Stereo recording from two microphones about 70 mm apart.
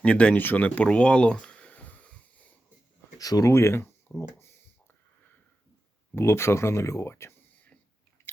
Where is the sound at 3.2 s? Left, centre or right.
Left.